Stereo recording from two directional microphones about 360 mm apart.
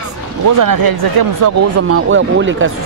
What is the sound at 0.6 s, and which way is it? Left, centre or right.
Speech, right.